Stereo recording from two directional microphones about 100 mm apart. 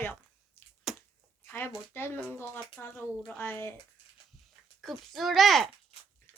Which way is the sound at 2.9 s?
5° left (ahead or behind).